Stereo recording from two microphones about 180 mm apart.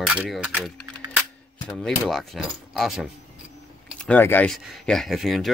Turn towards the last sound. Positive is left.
turn(degrees=0)  # may be behind; listen again after turning